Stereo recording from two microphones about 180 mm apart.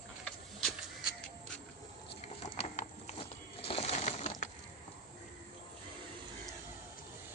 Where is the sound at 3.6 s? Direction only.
30° left (ahead or behind).